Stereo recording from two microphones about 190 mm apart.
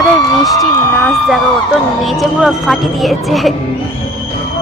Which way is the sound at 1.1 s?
Centre (ahead or behind).